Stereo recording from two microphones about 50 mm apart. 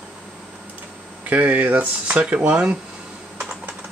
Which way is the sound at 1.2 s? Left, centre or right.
Right.